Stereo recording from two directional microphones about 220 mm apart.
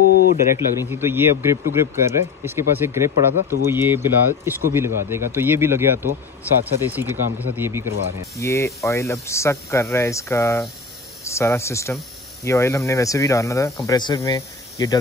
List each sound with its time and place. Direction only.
0.0 s a sound: 45° left (ahead or behind)
0.7 s speech: 10° right (ahead or behind)
8.4 s speech: 15° left (ahead or behind)